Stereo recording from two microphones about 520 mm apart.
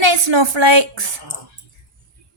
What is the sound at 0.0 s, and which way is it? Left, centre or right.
A woman's voice, right.